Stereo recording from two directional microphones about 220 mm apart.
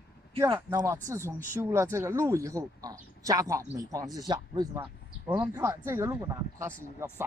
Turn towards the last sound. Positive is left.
turn(degrees=-15)  # may be behind; listen again after turning